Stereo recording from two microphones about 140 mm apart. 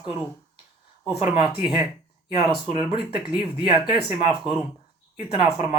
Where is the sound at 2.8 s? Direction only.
10° right (ahead or behind).